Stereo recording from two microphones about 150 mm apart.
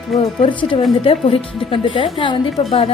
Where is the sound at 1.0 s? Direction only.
40° left (ahead or behind).